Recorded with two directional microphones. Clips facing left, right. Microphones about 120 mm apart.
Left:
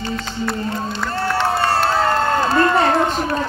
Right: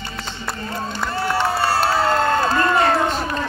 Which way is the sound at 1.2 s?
10° right (ahead or behind).